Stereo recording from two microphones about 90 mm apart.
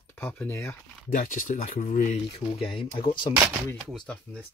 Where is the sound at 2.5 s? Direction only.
75° left (ahead or behind).